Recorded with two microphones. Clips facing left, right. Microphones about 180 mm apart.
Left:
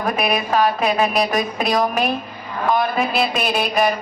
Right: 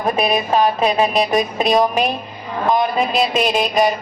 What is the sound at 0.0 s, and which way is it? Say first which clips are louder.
Speech: right 3 dB; 20° right (ahead or behind).